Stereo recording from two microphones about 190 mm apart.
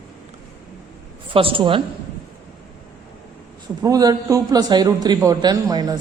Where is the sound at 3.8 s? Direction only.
20° right (ahead or behind).